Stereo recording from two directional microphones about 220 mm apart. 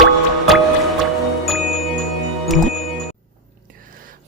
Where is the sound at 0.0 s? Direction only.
Centre (ahead or behind).